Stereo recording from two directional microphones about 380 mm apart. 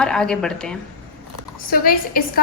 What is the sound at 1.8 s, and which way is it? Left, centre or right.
Speech, left.